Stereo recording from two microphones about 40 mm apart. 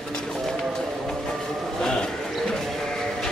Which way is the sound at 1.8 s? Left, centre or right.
Left.